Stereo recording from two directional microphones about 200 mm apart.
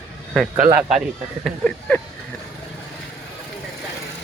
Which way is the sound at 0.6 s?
45° right (ahead or behind).